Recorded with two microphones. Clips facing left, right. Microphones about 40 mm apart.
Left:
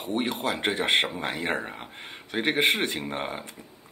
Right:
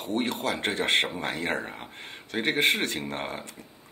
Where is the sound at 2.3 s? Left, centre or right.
Centre.